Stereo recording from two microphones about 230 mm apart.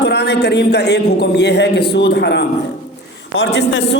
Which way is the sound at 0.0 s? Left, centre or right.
Left.